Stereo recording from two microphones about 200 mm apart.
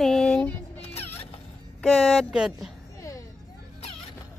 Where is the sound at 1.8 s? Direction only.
5° left (ahead or behind).